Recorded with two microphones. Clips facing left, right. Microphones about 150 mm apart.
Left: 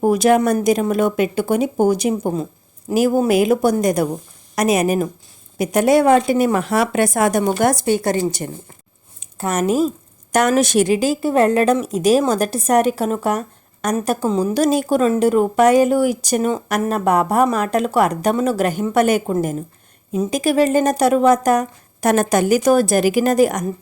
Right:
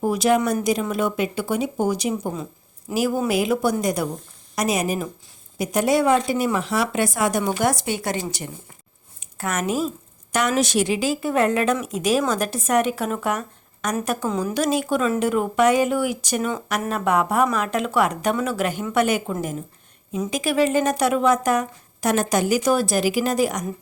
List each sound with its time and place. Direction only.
0.0 s a woman's voice: 50° left (ahead or behind)
9.2 s a woman's voice: 30° left (ahead or behind); by 23.6 s 50° left (ahead or behind)